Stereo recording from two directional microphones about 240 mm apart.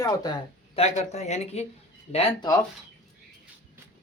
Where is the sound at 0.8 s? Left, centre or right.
Left.